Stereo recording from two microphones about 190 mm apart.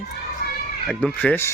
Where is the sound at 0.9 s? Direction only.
5° left (ahead or behind).